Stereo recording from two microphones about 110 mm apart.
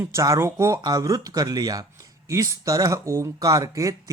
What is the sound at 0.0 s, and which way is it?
Speech, 25° right (ahead or behind).